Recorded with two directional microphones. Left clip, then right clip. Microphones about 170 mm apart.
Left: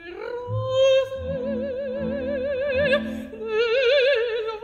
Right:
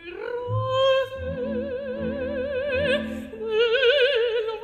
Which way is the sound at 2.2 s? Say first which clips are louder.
Left 2 dB; 40° left (ahead or behind).